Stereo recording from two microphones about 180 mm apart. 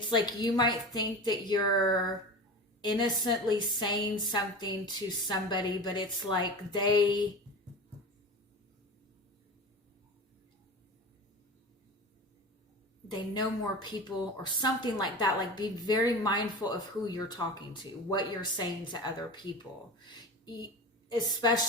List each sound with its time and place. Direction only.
0.2 s a woman's voice: 25° left (ahead or behind)
13.3 s a woman's voice: 25° left (ahead or behind)
20.1 s a sound: 20° left (ahead or behind)
21.1 s a woman's voice: 25° left (ahead or behind)